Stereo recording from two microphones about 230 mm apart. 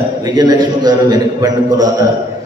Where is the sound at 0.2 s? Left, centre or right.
Centre.